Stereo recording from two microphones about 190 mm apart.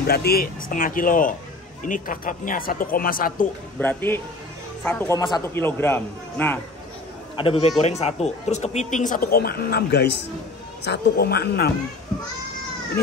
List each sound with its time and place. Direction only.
0.0 s speech: 55° left (ahead or behind)
3.8 s a man's voice: 10° left (ahead or behind)
7.3 s a man's voice: 30° left (ahead or behind); by 11.7 s 55° left (ahead or behind)